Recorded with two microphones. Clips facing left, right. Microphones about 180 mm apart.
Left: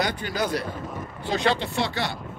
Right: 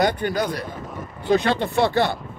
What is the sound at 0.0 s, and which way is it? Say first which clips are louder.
Speech: right 5 dB; 55° right (ahead or behind).